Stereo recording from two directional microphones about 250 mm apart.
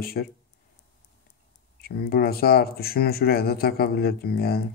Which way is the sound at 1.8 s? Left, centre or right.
Left.